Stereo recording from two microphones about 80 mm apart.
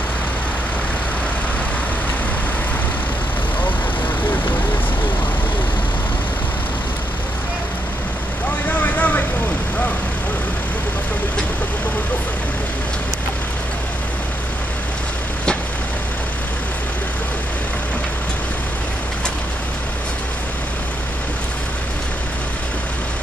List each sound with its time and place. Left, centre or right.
8.6 s vehicle: centre